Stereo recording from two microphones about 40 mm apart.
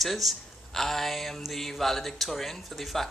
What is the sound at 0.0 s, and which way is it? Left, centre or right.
Speech, centre.